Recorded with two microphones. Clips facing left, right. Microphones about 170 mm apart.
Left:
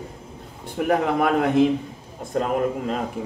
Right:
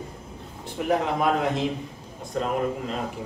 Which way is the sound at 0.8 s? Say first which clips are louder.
Left 3 dB; 60° left (ahead or behind).